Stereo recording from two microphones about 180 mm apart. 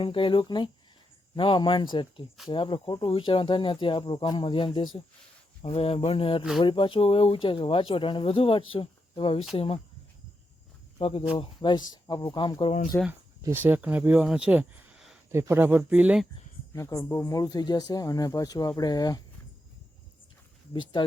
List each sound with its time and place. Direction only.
0.0 s speech: 30° left (ahead or behind)
10.9 s speech: 30° left (ahead or behind)
12.9 s speech: 10° left (ahead or behind)
13.4 s speech: 10° right (ahead or behind)
15.3 s speech: 15° right (ahead or behind)
16.7 s speech: 15° left (ahead or behind)